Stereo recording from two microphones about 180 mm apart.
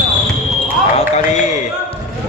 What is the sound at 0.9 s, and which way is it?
Speech, 40° left (ahead or behind).